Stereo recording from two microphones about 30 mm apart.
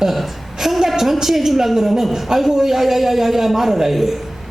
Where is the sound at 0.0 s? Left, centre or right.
Centre.